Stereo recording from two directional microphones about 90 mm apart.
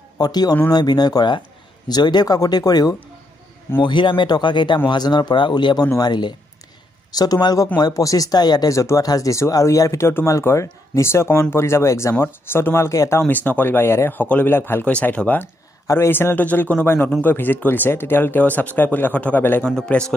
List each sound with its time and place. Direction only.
0.2 s speech: 50° left (ahead or behind)
3.8 s speech: 60° left (ahead or behind); by 13.2 s 35° left (ahead or behind)
13.3 s speech: 20° left (ahead or behind)
14.9 s speech: 15° left (ahead or behind)
19.9 s speech: 10° left (ahead or behind)